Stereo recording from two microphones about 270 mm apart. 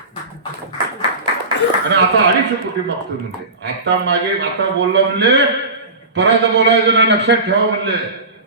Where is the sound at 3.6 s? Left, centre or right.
Right.